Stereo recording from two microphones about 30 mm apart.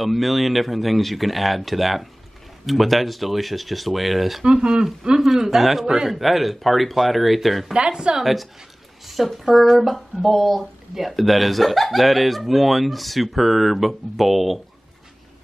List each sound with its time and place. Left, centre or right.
0.0 s speech: centre
4.5 s speech: right
5.2 s speech: centre
7.7 s speech: right
8.2 s speech: centre